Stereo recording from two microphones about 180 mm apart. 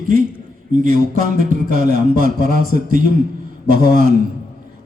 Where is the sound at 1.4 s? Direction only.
50° right (ahead or behind).